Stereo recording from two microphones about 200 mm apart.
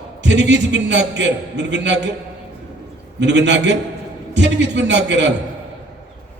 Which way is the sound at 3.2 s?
60° right (ahead or behind).